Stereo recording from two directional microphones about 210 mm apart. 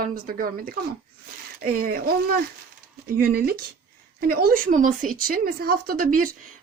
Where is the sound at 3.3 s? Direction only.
45° right (ahead or behind).